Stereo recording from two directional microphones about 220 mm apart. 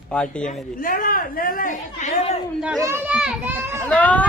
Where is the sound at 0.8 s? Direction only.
40° left (ahead or behind).